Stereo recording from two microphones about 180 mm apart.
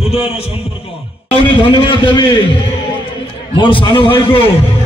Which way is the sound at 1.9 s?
25° left (ahead or behind).